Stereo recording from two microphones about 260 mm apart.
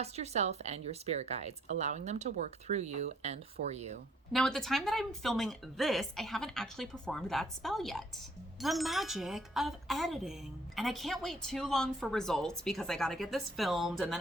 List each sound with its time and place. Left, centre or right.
0.0 s speech: right
4.3 s speech: centre